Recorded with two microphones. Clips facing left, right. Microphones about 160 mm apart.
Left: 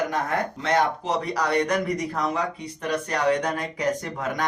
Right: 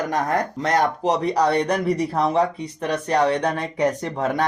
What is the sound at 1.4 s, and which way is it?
Speech, 30° right (ahead or behind).